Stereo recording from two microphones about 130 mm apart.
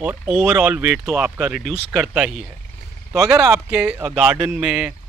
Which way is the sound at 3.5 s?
5° right (ahead or behind).